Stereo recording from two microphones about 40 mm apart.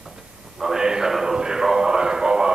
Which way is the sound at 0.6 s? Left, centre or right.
Centre.